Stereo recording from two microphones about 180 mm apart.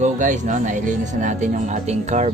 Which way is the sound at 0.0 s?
45° right (ahead or behind).